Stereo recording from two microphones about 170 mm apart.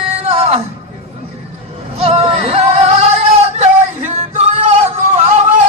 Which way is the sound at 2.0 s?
35° right (ahead or behind).